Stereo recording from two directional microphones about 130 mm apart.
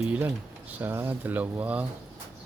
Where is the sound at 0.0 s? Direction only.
10° right (ahead or behind).